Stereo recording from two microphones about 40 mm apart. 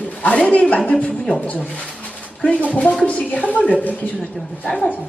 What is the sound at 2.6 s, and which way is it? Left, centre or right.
A woman's voice, left.